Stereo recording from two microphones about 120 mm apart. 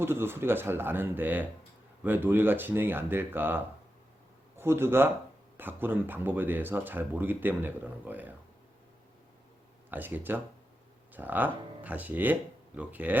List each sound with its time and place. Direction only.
0.0 s speech: 20° right (ahead or behind)
9.9 s speech: 15° right (ahead or behind)